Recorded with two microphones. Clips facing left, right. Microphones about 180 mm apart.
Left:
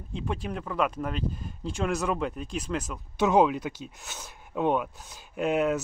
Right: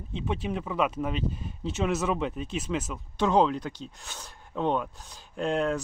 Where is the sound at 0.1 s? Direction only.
Centre (ahead or behind).